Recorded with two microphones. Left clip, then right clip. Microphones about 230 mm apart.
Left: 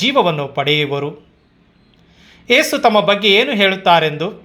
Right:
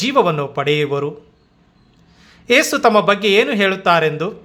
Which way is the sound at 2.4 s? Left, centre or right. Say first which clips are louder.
Left 1 dB; centre.